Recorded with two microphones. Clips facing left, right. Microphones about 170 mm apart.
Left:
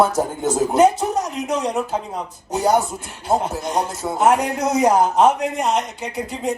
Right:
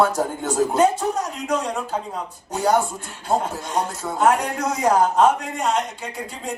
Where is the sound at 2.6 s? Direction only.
20° left (ahead or behind).